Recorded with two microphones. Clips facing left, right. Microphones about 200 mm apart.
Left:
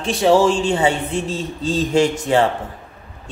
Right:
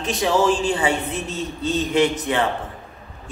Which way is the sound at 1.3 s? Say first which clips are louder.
Left 2 dB; 90° left.